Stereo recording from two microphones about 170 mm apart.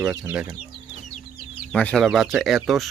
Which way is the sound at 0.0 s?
10° right (ahead or behind).